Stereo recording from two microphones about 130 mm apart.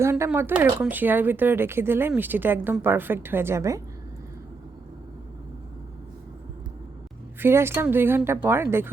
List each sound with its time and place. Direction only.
0.0 s speech: 20° right (ahead or behind)
7.3 s speech: 20° right (ahead or behind)